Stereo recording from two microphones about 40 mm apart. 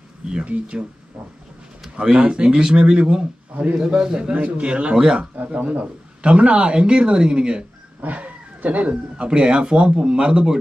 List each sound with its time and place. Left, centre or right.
0.5 s speech: right
2.0 s speech: right
8.0 s a sound: right
9.1 s speech: right